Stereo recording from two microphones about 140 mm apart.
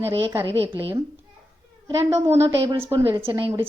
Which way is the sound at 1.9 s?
20° right (ahead or behind).